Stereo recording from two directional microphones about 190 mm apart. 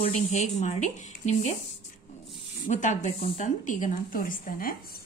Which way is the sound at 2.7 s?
40° left (ahead or behind).